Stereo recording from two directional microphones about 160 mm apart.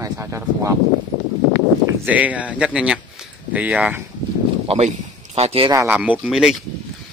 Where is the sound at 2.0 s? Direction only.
10° right (ahead or behind).